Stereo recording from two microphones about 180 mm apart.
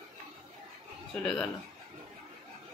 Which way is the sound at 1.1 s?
5° left (ahead or behind).